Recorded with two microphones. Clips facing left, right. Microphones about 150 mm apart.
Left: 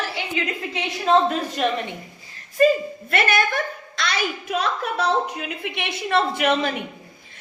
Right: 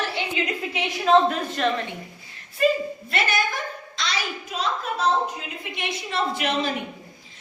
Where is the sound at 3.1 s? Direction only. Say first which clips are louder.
Left 5 dB; 60° left (ahead or behind).